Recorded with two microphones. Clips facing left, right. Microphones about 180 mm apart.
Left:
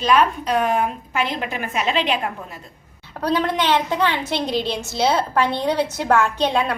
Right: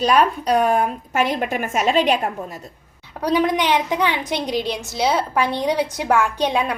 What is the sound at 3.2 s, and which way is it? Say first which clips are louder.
A woman's voice: right 2 dB; 15° right (ahead or behind).